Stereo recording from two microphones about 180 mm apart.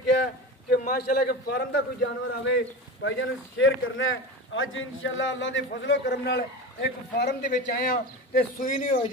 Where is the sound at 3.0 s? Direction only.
90° left.